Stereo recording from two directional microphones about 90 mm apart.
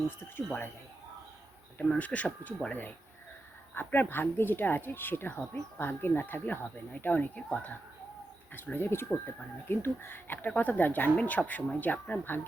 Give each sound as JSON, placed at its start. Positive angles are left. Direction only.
{"t": 1.8, "sound": "speech", "side_deg": 15}